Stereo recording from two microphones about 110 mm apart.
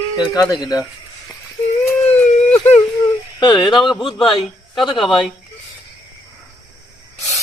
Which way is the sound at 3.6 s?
45° left (ahead or behind).